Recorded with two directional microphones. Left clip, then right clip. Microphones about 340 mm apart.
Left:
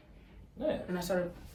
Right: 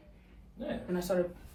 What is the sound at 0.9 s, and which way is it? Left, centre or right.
Speech, centre.